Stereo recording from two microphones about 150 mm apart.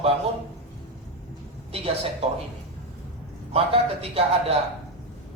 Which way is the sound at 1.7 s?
40° right (ahead or behind).